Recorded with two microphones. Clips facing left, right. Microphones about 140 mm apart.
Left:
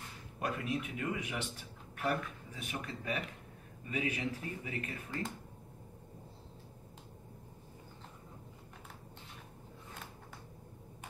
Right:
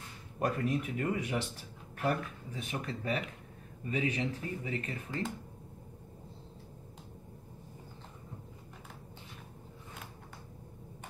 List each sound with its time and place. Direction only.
0.4 s speech: 40° right (ahead or behind)